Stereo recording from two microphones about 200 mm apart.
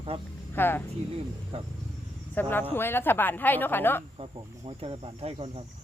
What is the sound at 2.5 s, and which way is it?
A woman's voice, 10° left (ahead or behind).